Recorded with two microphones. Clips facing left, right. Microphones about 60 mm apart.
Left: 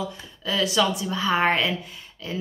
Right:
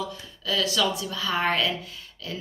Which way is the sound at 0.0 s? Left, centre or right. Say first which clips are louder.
Left 2 dB; left.